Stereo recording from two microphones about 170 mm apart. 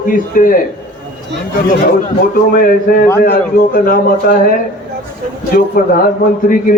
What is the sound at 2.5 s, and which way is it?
A man's voice, 60° left (ahead or behind).